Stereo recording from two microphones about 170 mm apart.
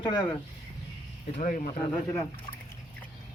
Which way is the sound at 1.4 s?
50° left (ahead or behind).